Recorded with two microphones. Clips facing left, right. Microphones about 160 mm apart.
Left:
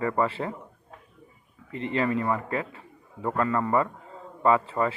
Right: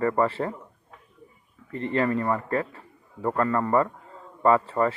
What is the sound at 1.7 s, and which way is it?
Speech, 40° right (ahead or behind).